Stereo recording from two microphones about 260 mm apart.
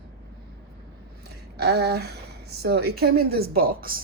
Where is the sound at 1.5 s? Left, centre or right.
Right.